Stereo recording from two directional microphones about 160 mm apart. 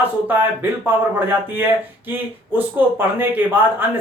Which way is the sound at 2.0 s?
10° right (ahead or behind).